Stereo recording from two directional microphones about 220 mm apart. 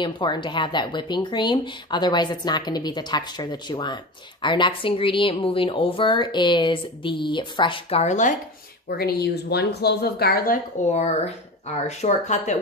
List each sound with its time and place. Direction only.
0.0 s speech: 20° left (ahead or behind)
8.8 s a woman's voice: 45° left (ahead or behind)